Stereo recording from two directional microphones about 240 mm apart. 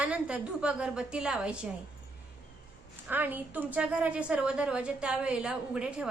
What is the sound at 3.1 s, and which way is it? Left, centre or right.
A woman's voice, centre.